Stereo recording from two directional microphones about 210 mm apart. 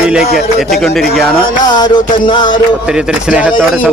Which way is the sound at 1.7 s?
20° left (ahead or behind).